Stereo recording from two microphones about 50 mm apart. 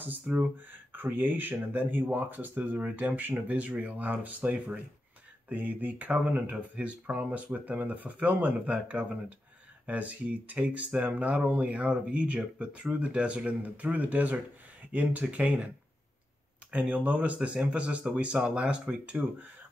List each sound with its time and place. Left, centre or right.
0.4 s speech: right
16.7 s speech: right